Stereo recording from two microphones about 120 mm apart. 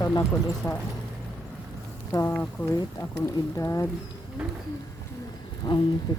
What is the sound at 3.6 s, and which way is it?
Speech, 25° left (ahead or behind).